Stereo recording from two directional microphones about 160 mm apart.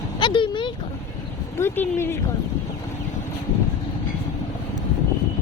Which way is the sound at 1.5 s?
15° left (ahead or behind).